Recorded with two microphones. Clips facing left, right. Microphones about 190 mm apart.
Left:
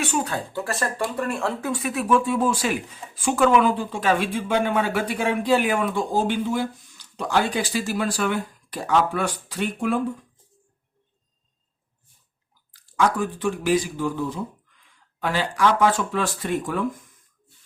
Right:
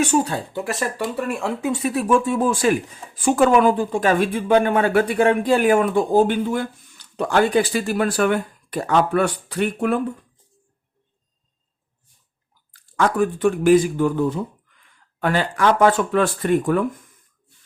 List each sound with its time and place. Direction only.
0.5 s speech: 15° right (ahead or behind)
0.9 s speech: 5° right (ahead or behind)
1.8 s speech: 35° right (ahead or behind); by 10.0 s 60° right (ahead or behind)
12.7 s speech: 55° right (ahead or behind)